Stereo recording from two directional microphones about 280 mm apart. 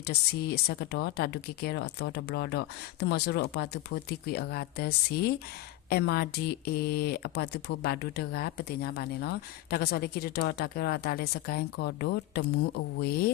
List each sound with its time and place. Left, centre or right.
0.0 s speech: left